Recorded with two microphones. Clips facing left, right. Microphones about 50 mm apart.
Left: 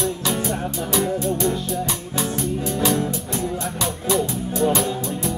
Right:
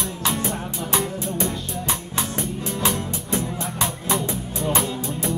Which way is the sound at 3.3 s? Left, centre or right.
Right.